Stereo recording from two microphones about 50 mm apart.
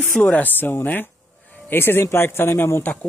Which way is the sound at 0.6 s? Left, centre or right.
Left.